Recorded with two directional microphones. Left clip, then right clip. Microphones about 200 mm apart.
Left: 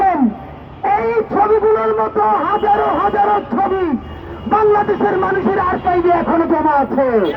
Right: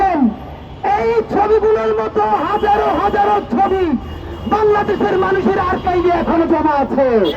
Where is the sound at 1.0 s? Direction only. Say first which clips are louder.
Even; 25° left (ahead or behind).